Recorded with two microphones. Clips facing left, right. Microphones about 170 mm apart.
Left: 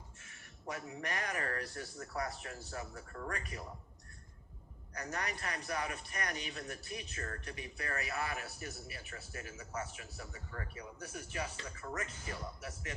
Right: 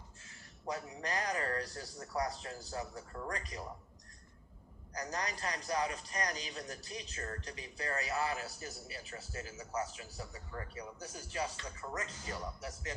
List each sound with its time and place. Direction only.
0.3 s a man's voice: 30° right (ahead or behind)
4.9 s a man's voice: 35° right (ahead or behind)